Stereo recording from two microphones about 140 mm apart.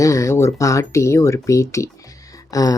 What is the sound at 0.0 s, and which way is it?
Speech, 25° left (ahead or behind).